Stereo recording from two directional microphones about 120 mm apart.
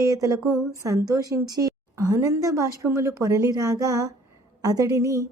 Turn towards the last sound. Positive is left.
turn(degrees=-30)  # may be behind; listen again after turning